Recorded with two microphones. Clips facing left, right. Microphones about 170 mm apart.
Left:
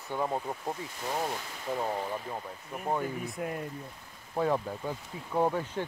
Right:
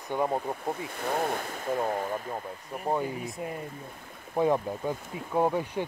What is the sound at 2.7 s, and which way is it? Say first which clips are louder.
Speech: right 2 dB; centre (ahead or behind).